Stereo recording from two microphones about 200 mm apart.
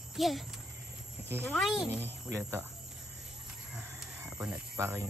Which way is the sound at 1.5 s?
Centre (ahead or behind).